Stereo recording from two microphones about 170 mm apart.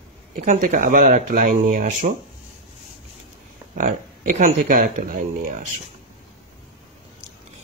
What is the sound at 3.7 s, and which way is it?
Speech, 50° right (ahead or behind).